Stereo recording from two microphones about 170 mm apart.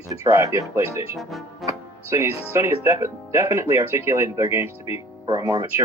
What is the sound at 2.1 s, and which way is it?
Speech, 15° right (ahead or behind).